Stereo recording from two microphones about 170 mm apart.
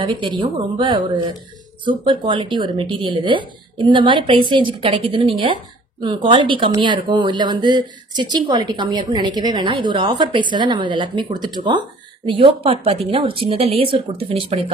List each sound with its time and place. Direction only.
0.0 s speech: 30° right (ahead or behind)